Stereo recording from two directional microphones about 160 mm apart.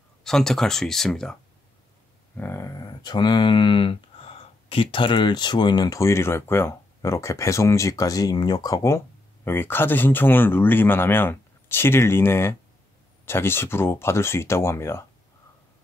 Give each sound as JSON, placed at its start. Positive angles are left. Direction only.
{"t": 0.2, "sound": "speech", "side_deg": 5}
{"t": 2.3, "sound": "speech", "side_deg": 15}